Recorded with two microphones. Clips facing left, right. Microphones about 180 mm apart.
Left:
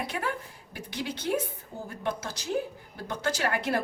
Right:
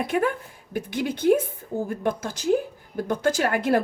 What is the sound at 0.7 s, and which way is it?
Speech, 50° right (ahead or behind).